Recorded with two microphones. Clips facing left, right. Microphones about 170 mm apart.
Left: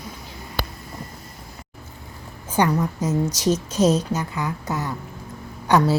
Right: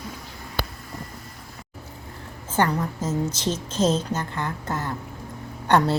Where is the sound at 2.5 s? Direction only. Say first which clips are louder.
Left 3 dB; 15° left (ahead or behind).